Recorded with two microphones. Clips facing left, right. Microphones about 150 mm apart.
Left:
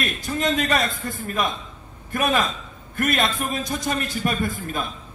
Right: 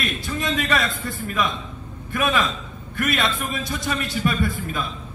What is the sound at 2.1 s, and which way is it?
A man's voice, 45° left (ahead or behind).